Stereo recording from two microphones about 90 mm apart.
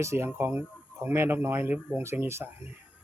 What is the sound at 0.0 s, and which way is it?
Speech, 30° right (ahead or behind).